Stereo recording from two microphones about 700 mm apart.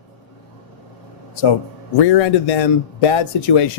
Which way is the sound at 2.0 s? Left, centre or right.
Left.